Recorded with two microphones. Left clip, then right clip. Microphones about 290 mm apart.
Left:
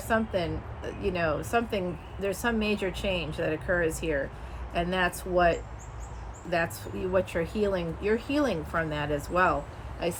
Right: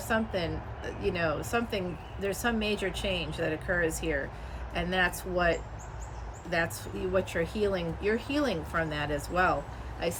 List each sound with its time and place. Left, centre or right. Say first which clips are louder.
0.1 s speech: left 3 dB; centre